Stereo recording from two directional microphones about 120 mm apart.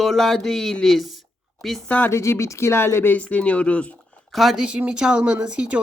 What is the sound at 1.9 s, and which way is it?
Speech, 15° left (ahead or behind).